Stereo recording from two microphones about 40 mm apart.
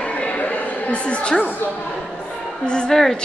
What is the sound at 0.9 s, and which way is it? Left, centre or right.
Speech, left.